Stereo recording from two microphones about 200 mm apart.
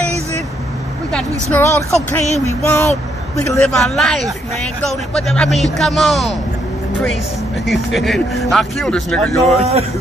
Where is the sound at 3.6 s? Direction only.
5° left (ahead or behind).